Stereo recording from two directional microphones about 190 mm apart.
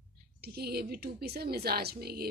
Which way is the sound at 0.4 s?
55° right (ahead or behind).